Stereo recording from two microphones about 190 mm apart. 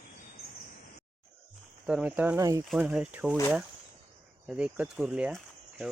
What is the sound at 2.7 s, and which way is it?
Speech, 5° right (ahead or behind).